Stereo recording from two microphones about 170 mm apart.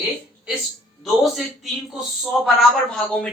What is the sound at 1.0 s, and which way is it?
A man's voice, centre (ahead or behind).